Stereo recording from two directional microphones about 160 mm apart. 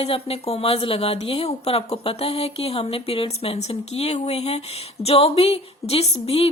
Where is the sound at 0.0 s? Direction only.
40° left (ahead or behind).